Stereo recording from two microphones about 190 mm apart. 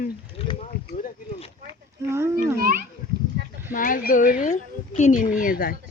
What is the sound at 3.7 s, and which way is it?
Speech, 45° left (ahead or behind).